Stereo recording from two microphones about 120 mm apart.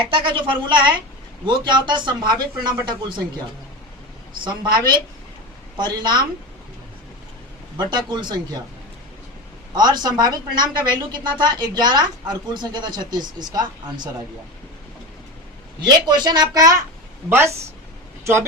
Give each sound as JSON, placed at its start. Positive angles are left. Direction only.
{"t": 0.1, "sound": "a woman's voice", "side_deg": -40}
{"t": 4.4, "sound": "a woman's voice", "side_deg": -40}
{"t": 7.8, "sound": "a woman's voice", "side_deg": -35}
{"t": 9.7, "sound": "a woman's voice", "side_deg": -35}
{"t": 15.8, "sound": "a woman's voice", "side_deg": -35}
{"t": 17.2, "sound": "speech", "side_deg": -20}